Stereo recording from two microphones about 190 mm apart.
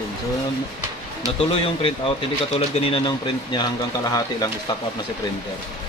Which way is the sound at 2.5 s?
30° left (ahead or behind).